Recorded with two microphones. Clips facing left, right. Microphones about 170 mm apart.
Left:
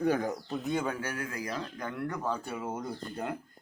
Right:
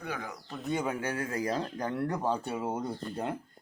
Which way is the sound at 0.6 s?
5° right (ahead or behind).